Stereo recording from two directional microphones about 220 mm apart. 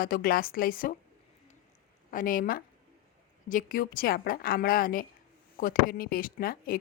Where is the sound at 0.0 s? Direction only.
40° left (ahead or behind).